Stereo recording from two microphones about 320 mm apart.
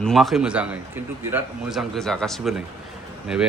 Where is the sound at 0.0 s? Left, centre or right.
Centre.